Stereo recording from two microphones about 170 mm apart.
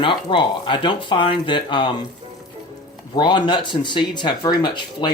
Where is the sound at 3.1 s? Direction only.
25° left (ahead or behind).